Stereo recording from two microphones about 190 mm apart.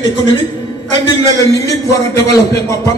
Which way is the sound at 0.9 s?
20° left (ahead or behind).